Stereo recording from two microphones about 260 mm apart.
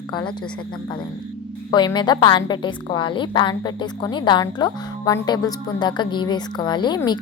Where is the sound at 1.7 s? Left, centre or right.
Centre.